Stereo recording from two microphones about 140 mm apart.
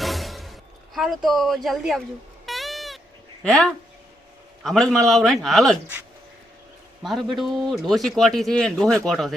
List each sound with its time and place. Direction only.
0.0 s a sound: centre (ahead or behind)
2.5 s bleat: centre (ahead or behind)
3.4 s a man's voice: 5° left (ahead or behind)
7.0 s a man's voice: centre (ahead or behind)